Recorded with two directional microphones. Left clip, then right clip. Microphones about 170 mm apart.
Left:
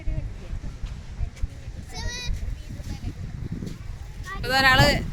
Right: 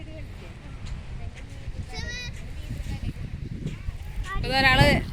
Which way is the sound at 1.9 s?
80° left.